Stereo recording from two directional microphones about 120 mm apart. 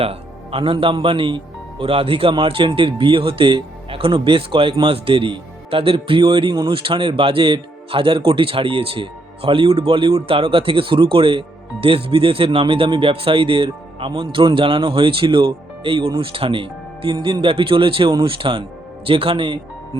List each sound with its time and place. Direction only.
0.0 s speech: 50° right (ahead or behind)